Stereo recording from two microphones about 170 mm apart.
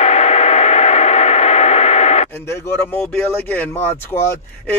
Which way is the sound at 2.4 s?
15° left (ahead or behind).